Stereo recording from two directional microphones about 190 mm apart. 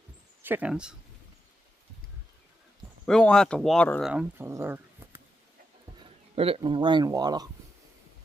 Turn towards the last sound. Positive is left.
turn(degrees=-20)  # may be behind; listen again after turning